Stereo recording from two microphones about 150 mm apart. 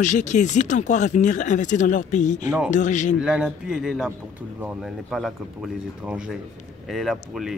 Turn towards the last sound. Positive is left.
turn(degrees=0)  # may be behind; listen again after turning